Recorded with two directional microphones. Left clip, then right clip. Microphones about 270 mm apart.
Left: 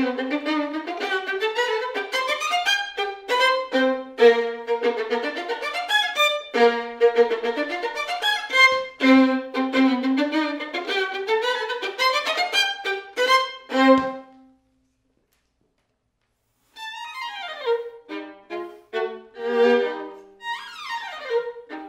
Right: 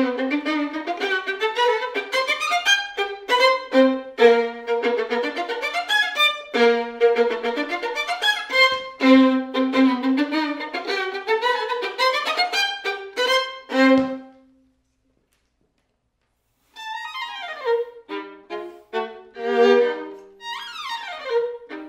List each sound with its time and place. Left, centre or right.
0.0 s violin: right
9.7 s violin: centre
17.2 s music: centre
18.9 s violin: right
20.3 s music: right